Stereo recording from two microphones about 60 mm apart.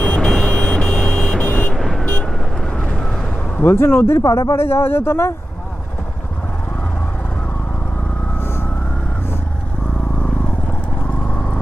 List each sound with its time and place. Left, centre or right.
0.0 s vehicle: centre
1.7 s vehicle: centre
2.7 s vehicle: left
3.6 s speech: left
4.2 s speech: left
4.5 s speech: left